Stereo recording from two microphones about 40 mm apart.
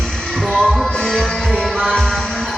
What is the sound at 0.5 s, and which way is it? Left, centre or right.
Music, centre.